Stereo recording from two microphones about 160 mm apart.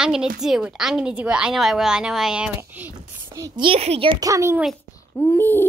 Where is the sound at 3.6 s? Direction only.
40° right (ahead or behind).